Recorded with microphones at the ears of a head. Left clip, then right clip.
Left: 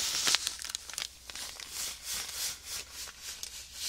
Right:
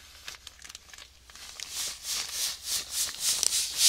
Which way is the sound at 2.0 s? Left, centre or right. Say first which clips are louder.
Right 6 dB; right.